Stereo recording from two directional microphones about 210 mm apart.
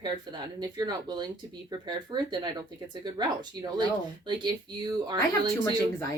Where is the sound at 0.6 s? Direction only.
20° right (ahead or behind).